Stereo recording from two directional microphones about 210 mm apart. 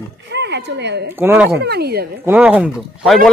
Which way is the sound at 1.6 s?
50° right (ahead or behind).